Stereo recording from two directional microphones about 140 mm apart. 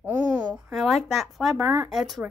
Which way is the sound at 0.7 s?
Centre (ahead or behind).